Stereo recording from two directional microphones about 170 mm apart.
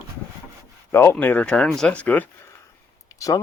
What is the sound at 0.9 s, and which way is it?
Speech, 15° left (ahead or behind).